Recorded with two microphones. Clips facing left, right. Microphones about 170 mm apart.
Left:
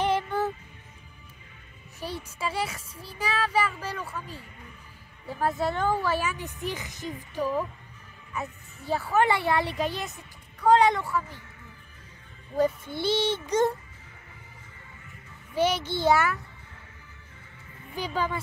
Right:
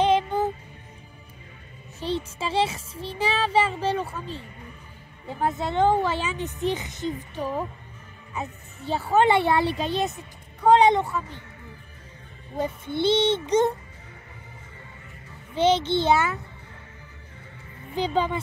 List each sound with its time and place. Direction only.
0.0 s music: 20° right (ahead or behind)
2.0 s speech: 25° right (ahead or behind)
12.5 s speech: 20° right (ahead or behind)
15.5 s speech: 25° right (ahead or behind)
17.9 s speech: 25° right (ahead or behind)